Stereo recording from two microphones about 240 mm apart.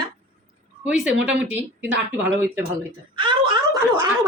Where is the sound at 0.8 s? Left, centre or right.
Centre.